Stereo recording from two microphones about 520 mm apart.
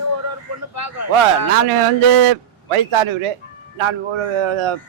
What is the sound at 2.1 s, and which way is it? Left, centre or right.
A man's voice, right.